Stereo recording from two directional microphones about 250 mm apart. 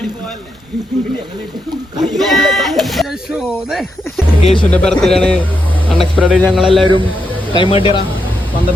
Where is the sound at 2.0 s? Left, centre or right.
Centre.